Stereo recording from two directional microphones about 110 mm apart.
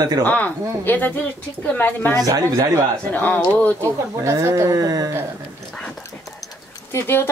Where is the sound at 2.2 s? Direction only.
35° right (ahead or behind).